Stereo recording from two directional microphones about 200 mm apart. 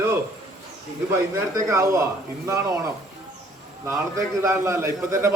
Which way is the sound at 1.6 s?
15° right (ahead or behind).